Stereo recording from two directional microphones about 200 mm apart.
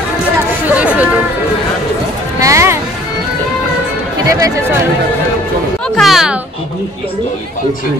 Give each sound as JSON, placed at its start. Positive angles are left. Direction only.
{"t": 0.7, "sound": "a sound", "side_deg": -5}
{"t": 2.4, "sound": "music", "side_deg": -15}
{"t": 4.3, "sound": "speech", "side_deg": -15}
{"t": 5.9, "sound": "a child's voice", "side_deg": 0}